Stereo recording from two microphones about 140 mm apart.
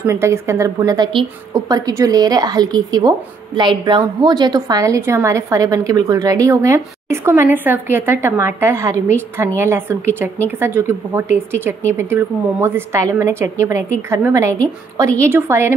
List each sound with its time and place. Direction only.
0.0 s a woman's voice: 20° right (ahead or behind)